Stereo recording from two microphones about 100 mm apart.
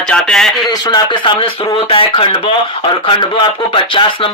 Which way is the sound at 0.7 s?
45° left (ahead or behind).